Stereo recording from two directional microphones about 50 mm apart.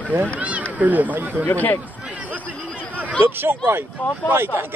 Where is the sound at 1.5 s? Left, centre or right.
Left.